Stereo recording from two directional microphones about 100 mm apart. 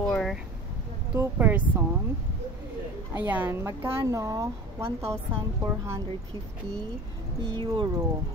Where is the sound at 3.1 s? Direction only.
20° right (ahead or behind).